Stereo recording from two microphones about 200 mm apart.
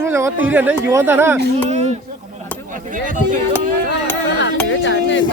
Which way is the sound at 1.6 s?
35° right (ahead or behind).